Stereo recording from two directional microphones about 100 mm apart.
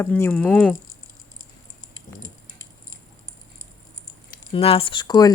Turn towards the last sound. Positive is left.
turn(degrees=40)  # may be behind; listen again after turning